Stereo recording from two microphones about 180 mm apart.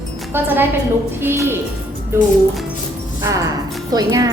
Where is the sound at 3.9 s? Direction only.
20° right (ahead or behind).